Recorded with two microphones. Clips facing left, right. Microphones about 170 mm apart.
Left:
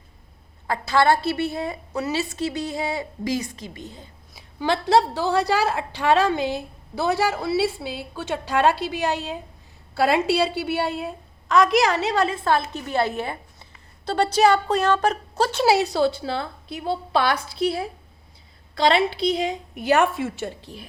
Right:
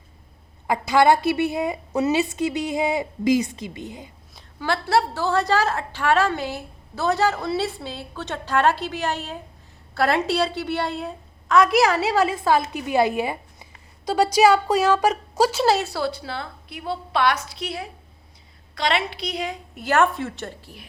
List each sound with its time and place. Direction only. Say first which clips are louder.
0.7 s a woman's voice: right 2 dB; 15° right (ahead or behind)
4.6 s a woman's voice: left 2 dB; 20° left (ahead or behind); by 15.6 s 5° right (ahead or behind)
15.6 s a woman's voice: left 2 dB; 15° left (ahead or behind)
19.7 s a woman's voice: even; 15° left (ahead or behind)
20.6 s a woman's voice: left 4 dB; 20° left (ahead or behind)